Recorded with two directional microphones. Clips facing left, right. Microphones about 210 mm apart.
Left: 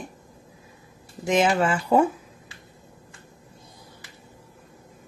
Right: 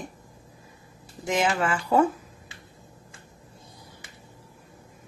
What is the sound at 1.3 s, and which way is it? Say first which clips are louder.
Speech: left 4 dB; 25° left (ahead or behind).